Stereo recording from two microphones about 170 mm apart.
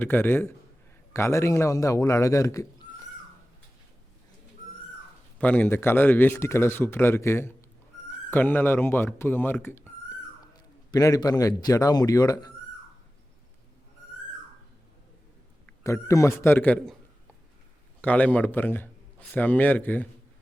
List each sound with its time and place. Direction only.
0.0 s speech: 10° left (ahead or behind)
5.4 s speech: 10° left (ahead or behind)
10.9 s speech: 20° left (ahead or behind)
15.8 s speech: 15° left (ahead or behind)
18.0 s speech: 10° left (ahead or behind)